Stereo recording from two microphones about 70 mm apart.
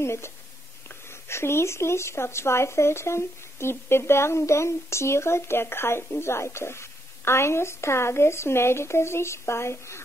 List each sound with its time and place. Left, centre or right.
0.0 s speech: left